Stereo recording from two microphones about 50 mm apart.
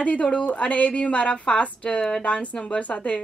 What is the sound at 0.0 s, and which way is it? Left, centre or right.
Speech, left.